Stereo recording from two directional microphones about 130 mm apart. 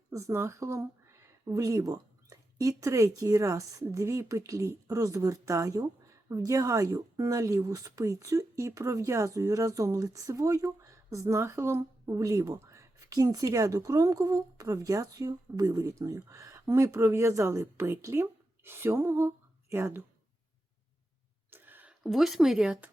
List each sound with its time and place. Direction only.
0.1 s speech: 20° right (ahead or behind)
21.5 s a sound: 15° right (ahead or behind)
22.0 s speech: centre (ahead or behind)